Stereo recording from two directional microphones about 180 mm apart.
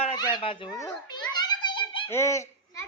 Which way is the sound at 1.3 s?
25° left (ahead or behind).